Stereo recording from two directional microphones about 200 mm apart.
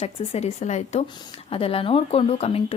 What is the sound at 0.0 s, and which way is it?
Speech, 35° left (ahead or behind).